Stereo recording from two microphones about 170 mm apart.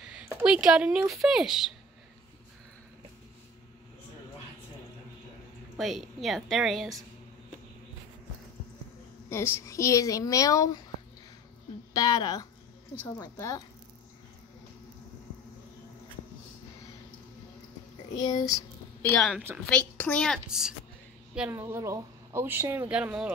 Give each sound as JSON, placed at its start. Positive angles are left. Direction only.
{"t": 0.3, "sound": "speech", "side_deg": -5}
{"t": 5.8, "sound": "speech", "side_deg": 0}
{"t": 9.3, "sound": "a woman's voice", "side_deg": 15}
{"t": 11.9, "sound": "a woman's voice", "side_deg": 25}
{"t": 18.2, "sound": "a woman's voice", "side_deg": 20}
{"t": 19.0, "sound": "speech", "side_deg": 0}